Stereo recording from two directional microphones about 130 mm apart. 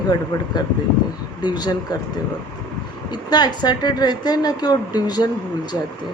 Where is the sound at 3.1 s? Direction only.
30° left (ahead or behind).